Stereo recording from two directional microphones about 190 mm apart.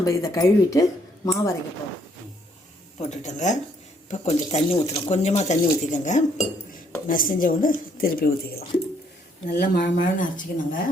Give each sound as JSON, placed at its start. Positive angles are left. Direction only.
{"t": 0.0, "sound": "speech", "side_deg": 15}
{"t": 3.1, "sound": "a woman's voice", "side_deg": 40}